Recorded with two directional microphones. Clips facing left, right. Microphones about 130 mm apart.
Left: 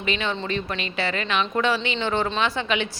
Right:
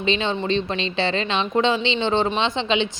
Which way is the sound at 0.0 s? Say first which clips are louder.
Right 4 dB; 25° right (ahead or behind).